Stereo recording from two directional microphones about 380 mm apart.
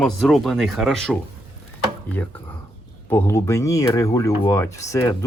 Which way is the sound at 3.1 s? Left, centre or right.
Centre.